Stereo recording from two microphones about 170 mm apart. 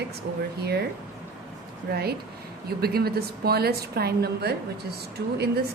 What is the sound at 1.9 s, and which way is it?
Speech, 70° right (ahead or behind).